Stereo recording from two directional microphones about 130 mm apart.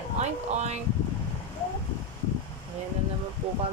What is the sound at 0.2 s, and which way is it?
Speech, 60° right (ahead or behind).